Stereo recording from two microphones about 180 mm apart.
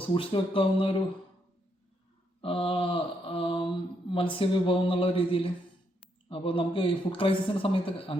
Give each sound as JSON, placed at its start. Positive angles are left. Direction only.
{"t": 0.0, "sound": "speech", "side_deg": 30}
{"t": 2.4, "sound": "speech", "side_deg": 30}